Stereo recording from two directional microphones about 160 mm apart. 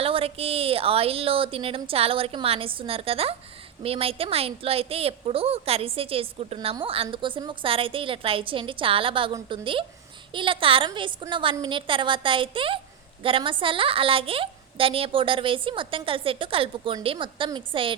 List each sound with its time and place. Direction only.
0.0 s a woman's voice: 35° right (ahead or behind)